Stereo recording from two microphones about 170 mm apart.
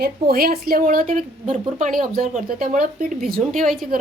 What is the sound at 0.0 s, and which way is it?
Speech, 65° right (ahead or behind).